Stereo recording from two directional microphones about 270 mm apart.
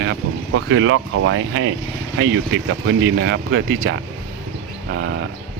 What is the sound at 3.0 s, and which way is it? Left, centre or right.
Speech, right.